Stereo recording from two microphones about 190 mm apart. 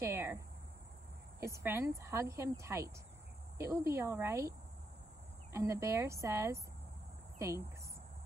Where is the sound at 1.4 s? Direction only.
15° right (ahead or behind).